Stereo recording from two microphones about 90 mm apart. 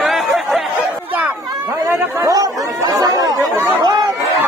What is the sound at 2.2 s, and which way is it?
Chatter, 40° right (ahead or behind).